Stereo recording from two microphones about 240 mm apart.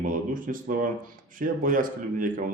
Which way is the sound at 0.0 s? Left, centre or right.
Right.